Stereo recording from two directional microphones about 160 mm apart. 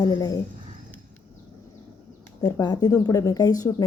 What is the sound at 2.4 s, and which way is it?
A woman's voice, 25° left (ahead or behind).